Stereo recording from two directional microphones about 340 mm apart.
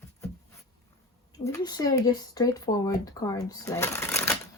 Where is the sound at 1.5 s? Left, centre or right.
Centre.